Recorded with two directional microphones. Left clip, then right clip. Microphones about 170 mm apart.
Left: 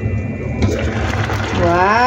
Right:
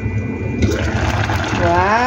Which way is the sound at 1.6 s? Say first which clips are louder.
Left 2 dB; 5° left (ahead or behind).